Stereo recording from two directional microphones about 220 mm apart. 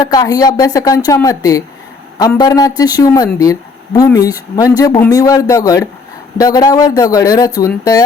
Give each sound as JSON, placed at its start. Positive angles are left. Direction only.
{"t": 0.0, "sound": "speech", "side_deg": 15}